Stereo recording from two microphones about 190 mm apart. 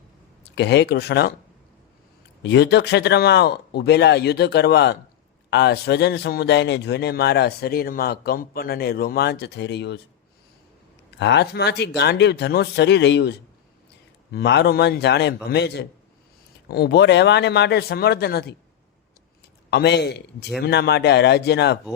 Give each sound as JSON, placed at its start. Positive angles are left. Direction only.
{"t": 0.5, "sound": "a man's voice", "side_deg": 65}
{"t": 2.4, "sound": "a man's voice", "side_deg": 65}
{"t": 11.2, "sound": "a man's voice", "side_deg": 65}
{"t": 14.3, "sound": "a man's voice", "side_deg": 60}
{"t": 19.7, "sound": "a man's voice", "side_deg": 60}